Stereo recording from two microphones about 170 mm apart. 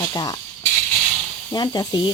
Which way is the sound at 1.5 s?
25° left (ahead or behind).